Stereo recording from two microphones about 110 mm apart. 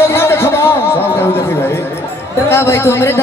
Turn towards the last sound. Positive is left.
turn(degrees=25)  # may be behind; listen again after turning